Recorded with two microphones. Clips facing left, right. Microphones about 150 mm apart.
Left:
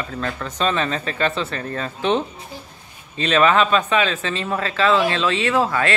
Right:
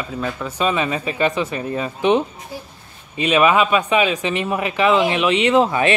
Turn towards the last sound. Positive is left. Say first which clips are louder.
# right 4 dB
turn(degrees=-20)  # may be behind; listen again after turning